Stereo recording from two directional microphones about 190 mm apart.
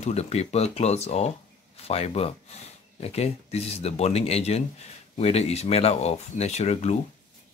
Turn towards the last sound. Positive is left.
turn(degrees=35)  # may be behind; listen again after turning